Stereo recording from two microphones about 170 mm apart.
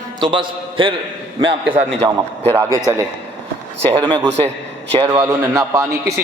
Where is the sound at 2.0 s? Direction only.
20° right (ahead or behind).